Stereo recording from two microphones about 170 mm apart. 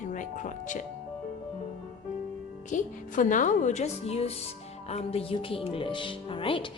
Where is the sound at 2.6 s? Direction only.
50° left (ahead or behind).